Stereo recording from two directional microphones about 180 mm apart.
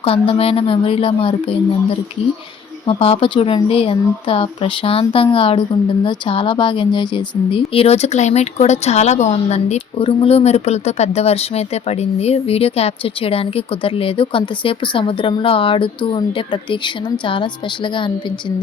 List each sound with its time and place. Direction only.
0.0 s speech: 30° left (ahead or behind)
2.8 s speech: 30° left (ahead or behind)